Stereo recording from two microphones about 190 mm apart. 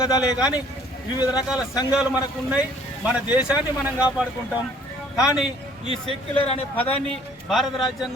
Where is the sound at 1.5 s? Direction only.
20° left (ahead or behind).